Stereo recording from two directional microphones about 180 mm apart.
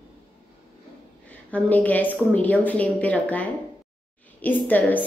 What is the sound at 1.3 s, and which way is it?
A woman's voice, 10° left (ahead or behind).